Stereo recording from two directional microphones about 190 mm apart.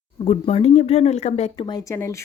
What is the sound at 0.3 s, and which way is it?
Speech, 30° left (ahead or behind).